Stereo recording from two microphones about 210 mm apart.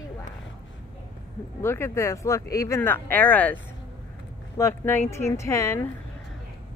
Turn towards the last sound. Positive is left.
turn(degrees=15)  # may be behind; listen again after turning